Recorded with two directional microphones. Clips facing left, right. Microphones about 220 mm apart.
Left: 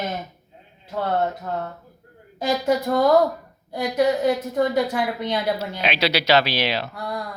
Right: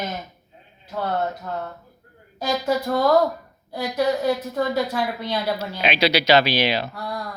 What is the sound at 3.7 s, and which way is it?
A woman's voice, 20° left (ahead or behind).